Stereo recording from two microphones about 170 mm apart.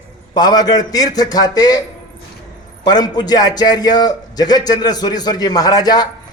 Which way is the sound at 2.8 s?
25° left (ahead or behind).